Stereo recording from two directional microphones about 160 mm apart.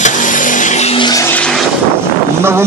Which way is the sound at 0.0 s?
55° left (ahead or behind).